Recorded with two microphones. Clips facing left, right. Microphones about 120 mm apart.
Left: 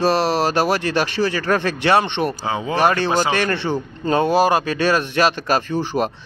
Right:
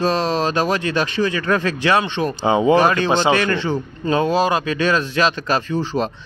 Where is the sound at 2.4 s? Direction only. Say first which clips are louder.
Right 8 dB; 25° right (ahead or behind).